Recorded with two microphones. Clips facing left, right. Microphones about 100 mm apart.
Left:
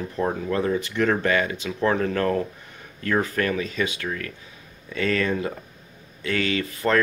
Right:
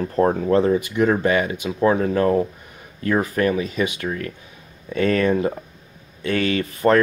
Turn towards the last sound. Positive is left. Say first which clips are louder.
# right 5 dB
turn(degrees=-30)  # may be behind; listen again after turning